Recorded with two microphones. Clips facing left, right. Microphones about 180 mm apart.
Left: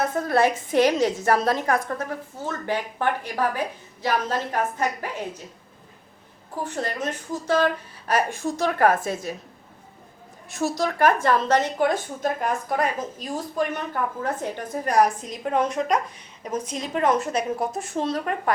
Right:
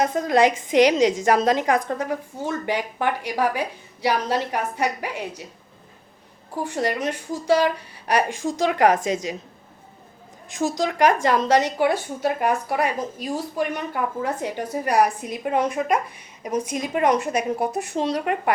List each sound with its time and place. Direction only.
0.0 s a woman's voice: 15° right (ahead or behind)
6.7 s a woman's voice: 15° right (ahead or behind)
10.5 s a woman's voice: 15° right (ahead or behind)